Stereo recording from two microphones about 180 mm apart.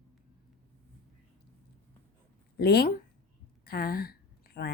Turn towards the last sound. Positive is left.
turn(degrees=60)  # may be behind; listen again after turning